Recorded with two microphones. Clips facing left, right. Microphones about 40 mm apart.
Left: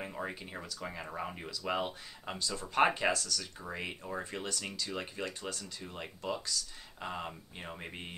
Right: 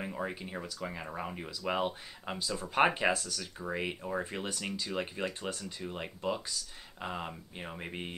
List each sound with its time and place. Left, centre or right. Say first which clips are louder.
0.0 s speech: right 2 dB; centre; by 5.7 s right
5.8 s speech: right 4 dB; centre